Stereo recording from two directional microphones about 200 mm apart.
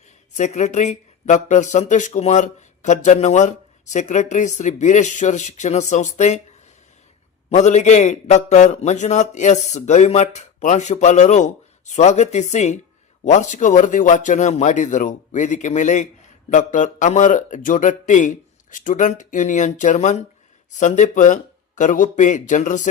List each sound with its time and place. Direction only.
0.3 s speech: 35° left (ahead or behind)
7.5 s speech: 35° left (ahead or behind)